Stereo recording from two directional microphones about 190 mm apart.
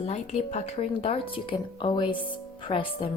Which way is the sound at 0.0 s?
35° left (ahead or behind).